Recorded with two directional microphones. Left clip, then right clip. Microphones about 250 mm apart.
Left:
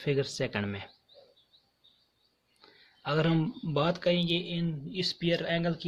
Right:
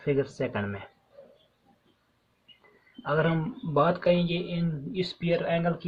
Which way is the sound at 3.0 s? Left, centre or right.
Left.